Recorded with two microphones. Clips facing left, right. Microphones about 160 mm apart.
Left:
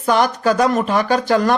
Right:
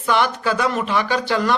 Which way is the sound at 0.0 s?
40° left (ahead or behind).